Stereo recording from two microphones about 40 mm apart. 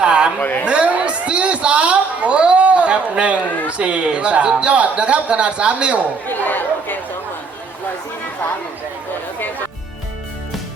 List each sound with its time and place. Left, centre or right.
0.0 s a sound: right
3.7 s speech: right
6.2 s chatter: left